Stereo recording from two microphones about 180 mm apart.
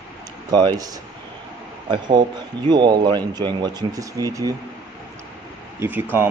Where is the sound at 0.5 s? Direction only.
25° right (ahead or behind).